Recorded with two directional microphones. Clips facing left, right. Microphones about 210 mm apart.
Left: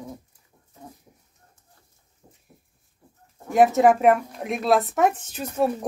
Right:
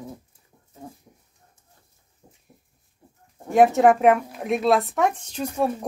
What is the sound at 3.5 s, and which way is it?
Speech, centre (ahead or behind).